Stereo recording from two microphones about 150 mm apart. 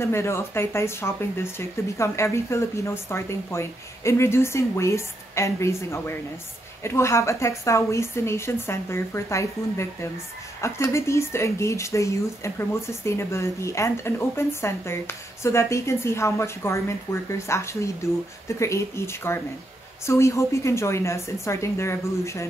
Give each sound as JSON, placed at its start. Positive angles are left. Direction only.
{"t": 0.0, "sound": "speech", "side_deg": 20}